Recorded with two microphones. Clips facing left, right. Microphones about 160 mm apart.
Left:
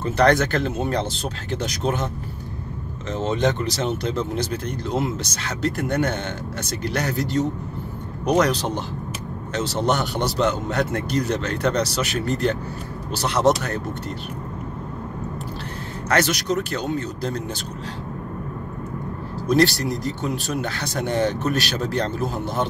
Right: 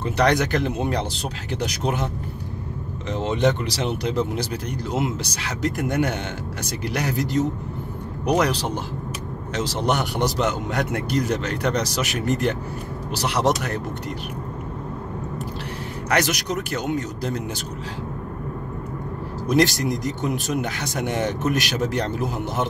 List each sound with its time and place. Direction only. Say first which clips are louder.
0.0 s speech: left 2 dB; 15° right (ahead or behind)
3.1 s speech: right 1 dB; 15° right (ahead or behind)
16.1 s speech: left 2 dB; 15° right (ahead or behind)
19.4 s speech: left 1 dB; 15° right (ahead or behind)